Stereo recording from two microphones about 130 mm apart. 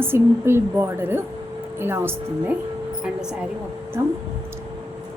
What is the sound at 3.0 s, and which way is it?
Speech, 5° right (ahead or behind).